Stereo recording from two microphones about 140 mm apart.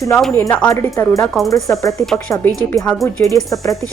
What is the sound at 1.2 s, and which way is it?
Speech, centre (ahead or behind).